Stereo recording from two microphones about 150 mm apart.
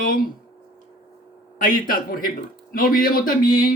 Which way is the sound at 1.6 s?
65° left (ahead or behind).